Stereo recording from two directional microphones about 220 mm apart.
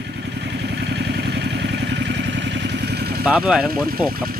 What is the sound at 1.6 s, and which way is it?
Vehicle, 50° right (ahead or behind).